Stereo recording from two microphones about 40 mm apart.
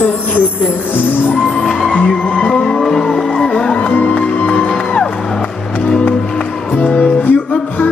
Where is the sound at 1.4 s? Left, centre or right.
Left.